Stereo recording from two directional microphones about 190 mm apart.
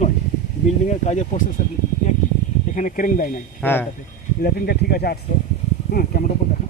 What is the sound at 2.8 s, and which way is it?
Speech, 45° left (ahead or behind).